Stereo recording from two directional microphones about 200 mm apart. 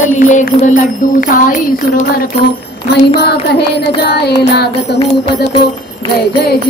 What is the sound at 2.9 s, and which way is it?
Music, 55° left (ahead or behind).